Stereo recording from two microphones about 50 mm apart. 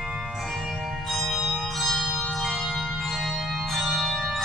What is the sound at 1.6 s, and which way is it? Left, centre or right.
Music, centre.